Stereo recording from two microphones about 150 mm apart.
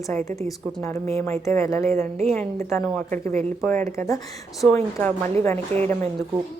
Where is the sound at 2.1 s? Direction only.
45° right (ahead or behind).